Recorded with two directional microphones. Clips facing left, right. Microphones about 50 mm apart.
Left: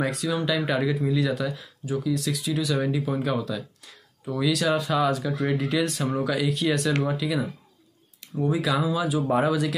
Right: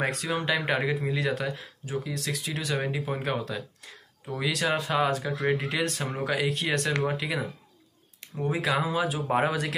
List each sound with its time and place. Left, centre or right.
0.0 s speech: right